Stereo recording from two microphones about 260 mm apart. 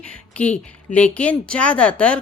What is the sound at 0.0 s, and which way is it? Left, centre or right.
A woman's voice, centre.